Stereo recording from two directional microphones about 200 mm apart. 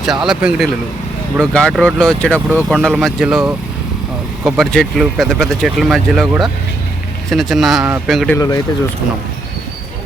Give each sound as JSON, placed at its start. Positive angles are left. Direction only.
{"t": 0.0, "sound": "speech", "side_deg": 0}
{"t": 8.4, "sound": "speech", "side_deg": 20}